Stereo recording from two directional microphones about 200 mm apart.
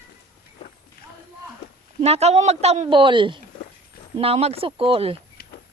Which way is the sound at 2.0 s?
30° right (ahead or behind).